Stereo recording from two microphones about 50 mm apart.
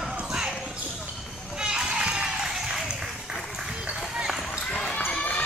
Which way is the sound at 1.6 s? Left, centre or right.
Centre.